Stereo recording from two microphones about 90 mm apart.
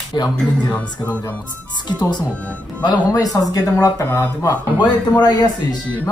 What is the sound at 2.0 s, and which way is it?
Speech, 50° left (ahead or behind).